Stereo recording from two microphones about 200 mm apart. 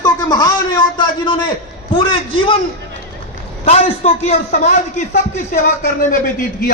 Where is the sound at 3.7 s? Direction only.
30° left (ahead or behind).